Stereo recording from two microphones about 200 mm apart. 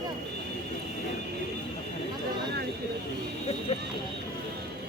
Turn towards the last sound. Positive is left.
turn(degrees=30)  # may be behind; listen again after turning